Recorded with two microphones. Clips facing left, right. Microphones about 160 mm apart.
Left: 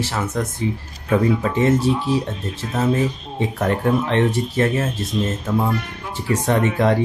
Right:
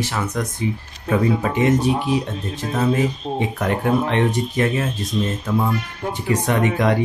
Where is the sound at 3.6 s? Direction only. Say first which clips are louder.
Left 1 dB; 35° left (ahead or behind).